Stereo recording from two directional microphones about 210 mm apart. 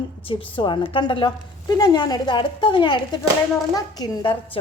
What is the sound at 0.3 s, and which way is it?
A woman's voice, 25° left (ahead or behind).